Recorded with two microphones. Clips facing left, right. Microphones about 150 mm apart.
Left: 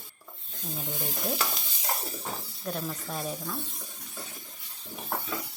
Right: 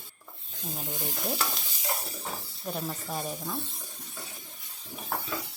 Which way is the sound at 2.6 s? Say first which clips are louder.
Even; 10° right (ahead or behind).